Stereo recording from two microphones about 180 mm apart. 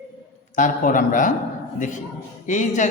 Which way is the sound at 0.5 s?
45° left (ahead or behind).